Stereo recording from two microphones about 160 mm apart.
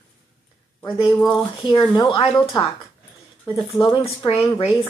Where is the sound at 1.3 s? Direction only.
30° left (ahead or behind).